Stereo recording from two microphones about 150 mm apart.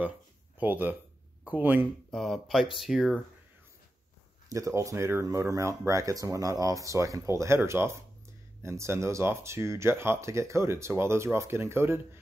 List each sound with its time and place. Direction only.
0.6 s speech: 10° right (ahead or behind)
2.0 s speech: centre (ahead or behind)
4.5 s speech: 20° right (ahead or behind)